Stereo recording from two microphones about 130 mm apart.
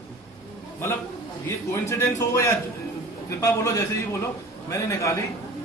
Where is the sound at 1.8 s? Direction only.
25° left (ahead or behind).